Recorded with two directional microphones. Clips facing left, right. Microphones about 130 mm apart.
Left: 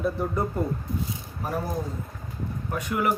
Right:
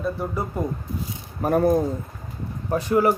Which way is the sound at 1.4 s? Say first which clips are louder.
Right 11 dB; 55° right (ahead or behind).